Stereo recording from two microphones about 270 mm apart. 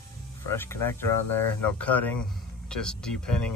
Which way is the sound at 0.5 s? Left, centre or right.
Centre.